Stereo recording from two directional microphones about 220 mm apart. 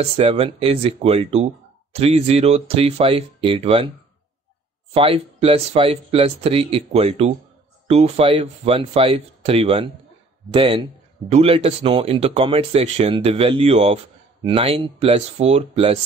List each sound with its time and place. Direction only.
0.0 s speech: 25° right (ahead or behind)
4.9 s speech: 25° right (ahead or behind)